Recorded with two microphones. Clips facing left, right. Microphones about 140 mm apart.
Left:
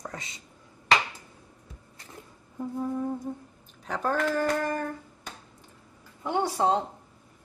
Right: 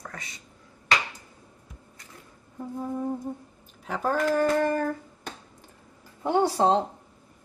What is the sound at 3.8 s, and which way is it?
Speech, 5° right (ahead or behind).